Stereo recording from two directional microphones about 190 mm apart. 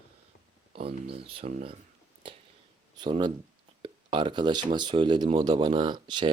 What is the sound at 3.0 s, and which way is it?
Speech, 25° right (ahead or behind).